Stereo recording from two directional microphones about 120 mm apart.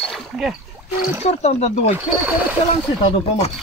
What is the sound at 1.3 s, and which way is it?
Speech, 65° left (ahead or behind).